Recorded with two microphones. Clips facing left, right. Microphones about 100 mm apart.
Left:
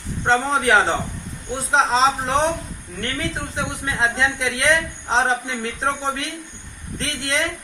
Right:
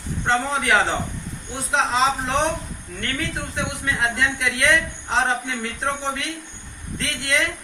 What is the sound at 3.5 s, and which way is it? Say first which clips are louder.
A man's voice: even; 25° left (ahead or behind).